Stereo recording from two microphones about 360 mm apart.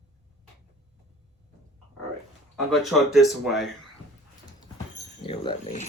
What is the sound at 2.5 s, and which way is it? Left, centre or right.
Speech, centre.